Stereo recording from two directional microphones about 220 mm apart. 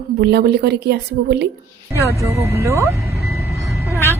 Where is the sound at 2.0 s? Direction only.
15° right (ahead or behind).